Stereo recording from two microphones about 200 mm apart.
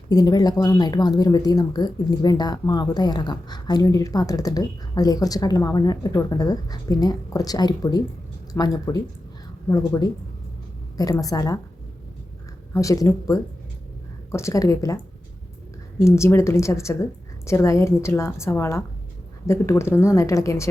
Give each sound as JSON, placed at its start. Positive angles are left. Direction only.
{"t": 0.1, "sound": "a woman's voice", "side_deg": 20}
{"t": 12.7, "sound": "a woman's voice", "side_deg": 15}
{"t": 16.0, "sound": "a woman's voice", "side_deg": 15}